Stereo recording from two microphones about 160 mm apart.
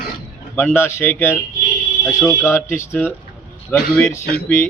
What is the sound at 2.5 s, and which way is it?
Speech, 15° left (ahead or behind).